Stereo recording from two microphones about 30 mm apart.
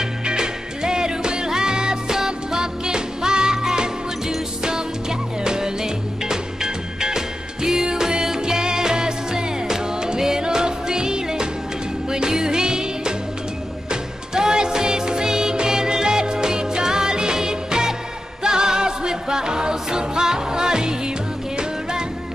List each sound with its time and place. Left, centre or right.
0.0 s music: right
5.4 s music: right